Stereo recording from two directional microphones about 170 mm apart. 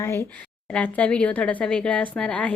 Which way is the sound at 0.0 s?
15° left (ahead or behind).